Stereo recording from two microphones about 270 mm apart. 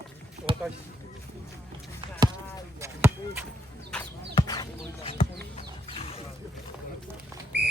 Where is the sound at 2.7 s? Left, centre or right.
Centre.